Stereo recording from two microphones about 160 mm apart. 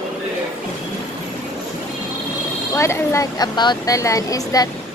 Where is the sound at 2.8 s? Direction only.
20° left (ahead or behind).